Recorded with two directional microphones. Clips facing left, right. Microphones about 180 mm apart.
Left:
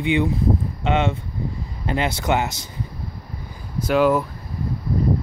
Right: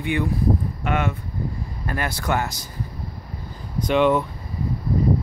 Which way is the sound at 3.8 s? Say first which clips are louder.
Left 1 dB; 5° left (ahead or behind).